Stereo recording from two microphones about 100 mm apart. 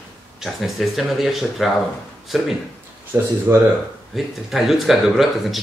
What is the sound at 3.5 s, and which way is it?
Speech, 20° right (ahead or behind).